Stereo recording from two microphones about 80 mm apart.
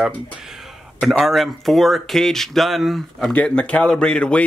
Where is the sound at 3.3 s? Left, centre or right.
Centre.